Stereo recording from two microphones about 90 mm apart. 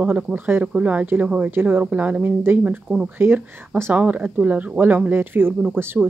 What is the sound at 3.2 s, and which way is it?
Speech, 25° right (ahead or behind).